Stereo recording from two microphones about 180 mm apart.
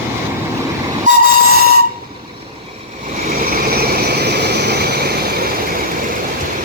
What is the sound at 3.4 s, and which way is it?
Vehicle, 60° right (ahead or behind).